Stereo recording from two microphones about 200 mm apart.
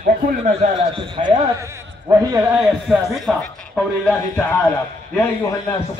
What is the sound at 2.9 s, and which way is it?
A man's voice, centre (ahead or behind).